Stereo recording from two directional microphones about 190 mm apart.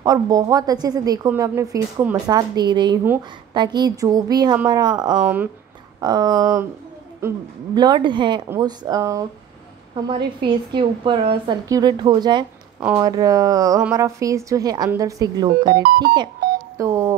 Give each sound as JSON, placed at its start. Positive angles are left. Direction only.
{"t": 0.0, "sound": "a woman's voice", "side_deg": -20}
{"t": 5.2, "sound": "speech", "side_deg": -10}
{"t": 5.9, "sound": "a woman's voice", "side_deg": -20}